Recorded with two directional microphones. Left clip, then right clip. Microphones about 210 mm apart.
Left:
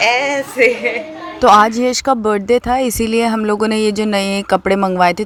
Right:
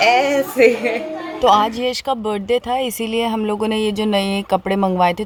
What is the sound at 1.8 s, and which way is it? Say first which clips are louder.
Speech: left 5 dB; 30° left (ahead or behind).